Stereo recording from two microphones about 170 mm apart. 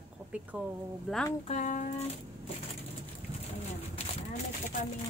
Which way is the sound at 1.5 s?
45° left (ahead or behind).